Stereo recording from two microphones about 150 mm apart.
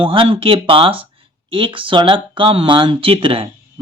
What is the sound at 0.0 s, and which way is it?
Speech, 35° right (ahead or behind).